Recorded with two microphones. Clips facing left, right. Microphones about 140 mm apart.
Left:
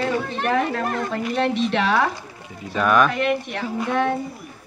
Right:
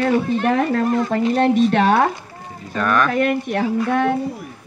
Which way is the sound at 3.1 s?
45° right (ahead or behind).